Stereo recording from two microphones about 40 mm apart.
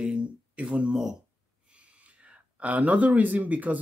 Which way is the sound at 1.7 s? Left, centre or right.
Right.